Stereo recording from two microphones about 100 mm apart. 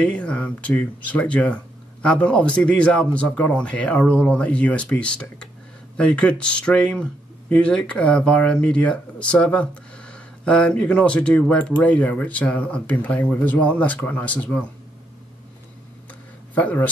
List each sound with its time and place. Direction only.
0.0 s speech: 10° left (ahead or behind)
16.5 s speech: 15° left (ahead or behind)